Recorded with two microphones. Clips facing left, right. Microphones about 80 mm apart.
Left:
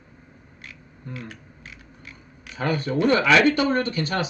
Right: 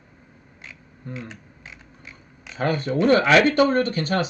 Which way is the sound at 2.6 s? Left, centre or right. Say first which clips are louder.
Right 1 dB; right.